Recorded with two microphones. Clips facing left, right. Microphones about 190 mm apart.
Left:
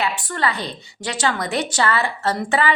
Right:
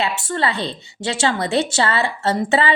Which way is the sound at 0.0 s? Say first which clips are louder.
Right 2 dB; 25° right (ahead or behind).